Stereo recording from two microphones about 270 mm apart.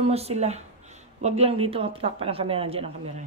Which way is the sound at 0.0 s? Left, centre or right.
Right.